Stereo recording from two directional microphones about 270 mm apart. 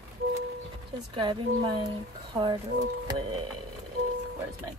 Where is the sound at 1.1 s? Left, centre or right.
Centre.